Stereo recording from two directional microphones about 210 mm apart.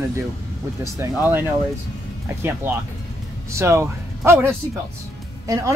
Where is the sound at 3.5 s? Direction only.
15° right (ahead or behind).